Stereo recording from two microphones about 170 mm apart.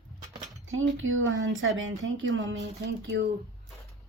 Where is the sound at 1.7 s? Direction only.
90° right.